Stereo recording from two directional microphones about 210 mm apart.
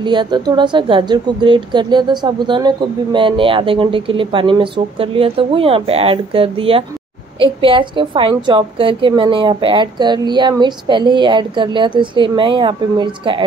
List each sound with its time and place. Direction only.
0.0 s a woman's voice: 20° right (ahead or behind)